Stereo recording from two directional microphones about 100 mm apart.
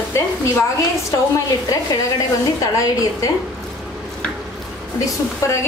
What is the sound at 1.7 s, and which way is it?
A woman's voice, 40° left (ahead or behind).